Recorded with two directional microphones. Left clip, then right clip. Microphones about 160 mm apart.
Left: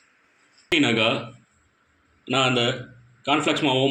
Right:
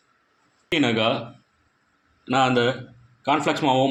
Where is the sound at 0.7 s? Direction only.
40° right (ahead or behind).